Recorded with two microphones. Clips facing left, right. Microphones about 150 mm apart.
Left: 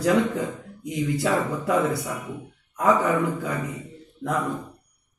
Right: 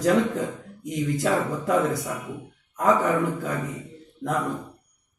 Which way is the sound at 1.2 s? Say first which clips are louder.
Right 1 dB; centre (ahead or behind).